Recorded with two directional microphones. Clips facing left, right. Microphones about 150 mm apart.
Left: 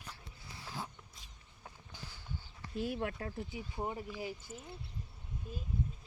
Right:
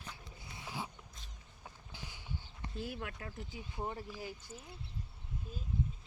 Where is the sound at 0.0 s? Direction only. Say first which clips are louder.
Right 1 dB; 5° left (ahead or behind).